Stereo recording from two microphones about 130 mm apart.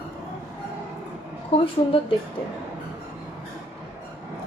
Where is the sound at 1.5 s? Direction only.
45° left (ahead or behind).